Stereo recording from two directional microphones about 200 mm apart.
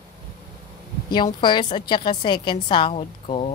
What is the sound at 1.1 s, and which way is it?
Speech, 25° left (ahead or behind).